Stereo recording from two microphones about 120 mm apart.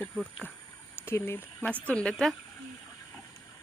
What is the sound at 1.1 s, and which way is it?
Speech, 20° left (ahead or behind).